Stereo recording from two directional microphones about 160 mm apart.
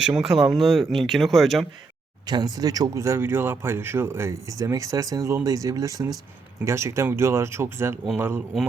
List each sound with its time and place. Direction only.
0.0 s speech: 5° right (ahead or behind)
2.2 s speech: 25° right (ahead or behind)